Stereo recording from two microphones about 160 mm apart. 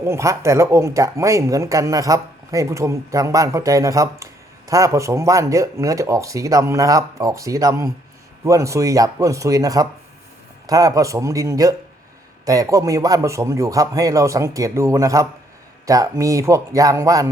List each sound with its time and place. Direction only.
0.0 s speech: 15° right (ahead or behind)